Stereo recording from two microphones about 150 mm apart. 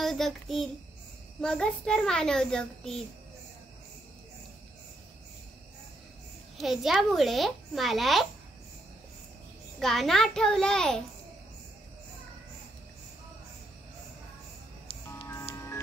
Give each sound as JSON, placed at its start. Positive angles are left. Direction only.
{"t": 0.0, "sound": "child singing", "side_deg": 0}
{"t": 1.4, "sound": "a child's voice", "side_deg": 5}
{"t": 6.6, "sound": "a child's voice", "side_deg": 0}
{"t": 9.8, "sound": "a child's voice", "side_deg": 0}
{"t": 14.9, "sound": "music", "side_deg": 35}
{"t": 15.5, "sound": "music", "side_deg": 20}